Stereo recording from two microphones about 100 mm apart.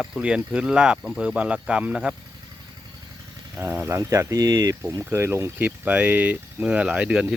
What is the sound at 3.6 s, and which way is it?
Speech, 20° right (ahead or behind).